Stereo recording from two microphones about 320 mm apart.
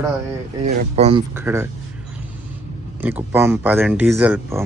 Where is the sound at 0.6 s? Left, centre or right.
Centre.